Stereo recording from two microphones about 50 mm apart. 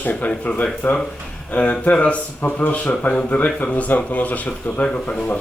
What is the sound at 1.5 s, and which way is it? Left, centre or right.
A woman's voice, left.